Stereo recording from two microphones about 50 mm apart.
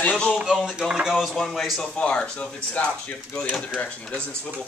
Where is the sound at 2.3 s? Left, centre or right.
Left.